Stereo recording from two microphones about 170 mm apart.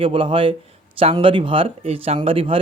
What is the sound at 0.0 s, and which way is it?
A man's voice, 30° right (ahead or behind).